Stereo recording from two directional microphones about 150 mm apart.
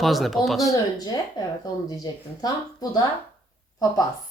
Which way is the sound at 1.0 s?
25° left (ahead or behind).